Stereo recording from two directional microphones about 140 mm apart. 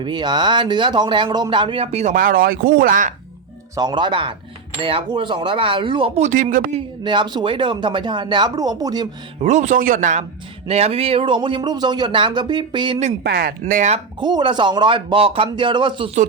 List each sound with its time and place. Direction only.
0.0 s speech: 35° right (ahead or behind); by 2.1 s 50° right (ahead or behind)
2.1 s speech: 90° right; by 3.2 s 70° right (ahead or behind)
3.8 s speech: 30° right (ahead or behind)
6.2 s speech: 65° right (ahead or behind)
7.0 s speech: 35° right (ahead or behind)
9.4 s speech: 55° right (ahead or behind)
10.7 s speech: 45° right (ahead or behind)
13.0 s speech: 70° right (ahead or behind)
14.2 s speech: 30° right (ahead or behind)